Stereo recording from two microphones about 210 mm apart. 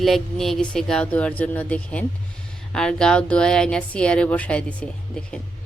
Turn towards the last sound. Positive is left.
turn(degrees=5)  # may be behind; listen again after turning